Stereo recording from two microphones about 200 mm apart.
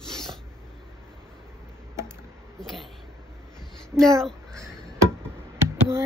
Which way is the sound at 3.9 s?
15° right (ahead or behind).